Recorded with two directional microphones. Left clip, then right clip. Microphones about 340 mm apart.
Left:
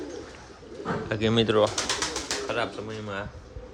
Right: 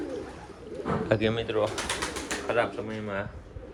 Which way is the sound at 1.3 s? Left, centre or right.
Left.